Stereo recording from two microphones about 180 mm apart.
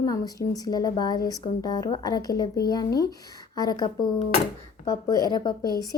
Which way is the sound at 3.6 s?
25° left (ahead or behind).